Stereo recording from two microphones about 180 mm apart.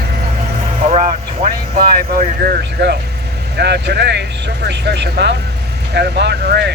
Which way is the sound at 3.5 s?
65° right (ahead or behind).